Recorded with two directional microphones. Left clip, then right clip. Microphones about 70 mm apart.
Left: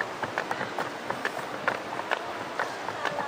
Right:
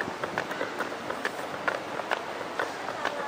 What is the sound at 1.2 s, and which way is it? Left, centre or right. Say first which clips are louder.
Run: left 1 dB; centre.